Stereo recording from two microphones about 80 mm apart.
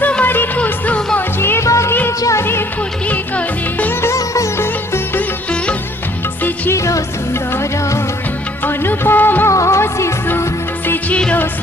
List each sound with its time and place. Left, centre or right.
0.0 s music: centre
1.4 s music: left
3.1 s music: centre
4.0 s music: left
6.7 s music: left
8.6 s music: left
9.5 s music: left